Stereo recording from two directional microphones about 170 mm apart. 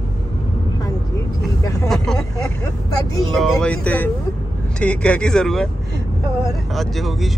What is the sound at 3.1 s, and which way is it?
Speech, centre (ahead or behind).